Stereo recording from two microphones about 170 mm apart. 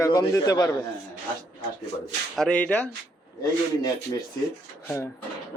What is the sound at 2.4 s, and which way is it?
Speech, 5° left (ahead or behind).